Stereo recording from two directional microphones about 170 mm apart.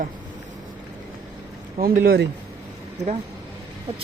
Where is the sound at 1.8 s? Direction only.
60° right (ahead or behind).